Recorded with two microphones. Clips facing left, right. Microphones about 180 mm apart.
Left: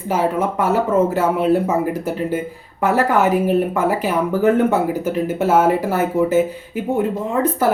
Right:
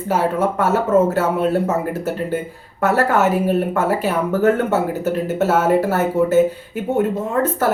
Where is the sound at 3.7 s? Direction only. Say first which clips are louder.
Even; 10° left (ahead or behind).